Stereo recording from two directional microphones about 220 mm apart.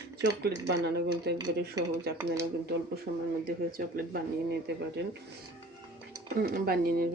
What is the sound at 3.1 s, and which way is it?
Speech, 40° right (ahead or behind).